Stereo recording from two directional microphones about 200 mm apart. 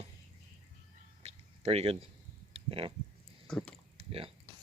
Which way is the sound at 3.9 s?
30° right (ahead or behind).